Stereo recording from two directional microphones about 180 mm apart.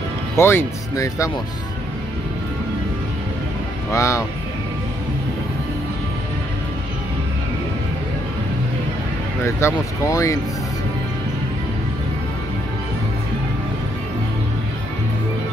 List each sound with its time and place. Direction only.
0.4 s speech: 15° left (ahead or behind)
3.9 s speech: 15° left (ahead or behind)
9.4 s speech: 15° left (ahead or behind)